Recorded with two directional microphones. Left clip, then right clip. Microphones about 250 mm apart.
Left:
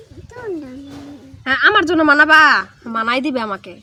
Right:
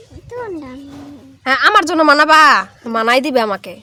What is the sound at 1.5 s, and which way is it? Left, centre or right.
A woman's voice, right.